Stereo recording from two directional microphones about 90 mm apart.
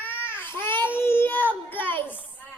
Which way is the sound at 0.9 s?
25° left (ahead or behind).